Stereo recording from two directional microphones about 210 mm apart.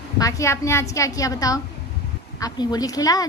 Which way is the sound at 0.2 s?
15° left (ahead or behind).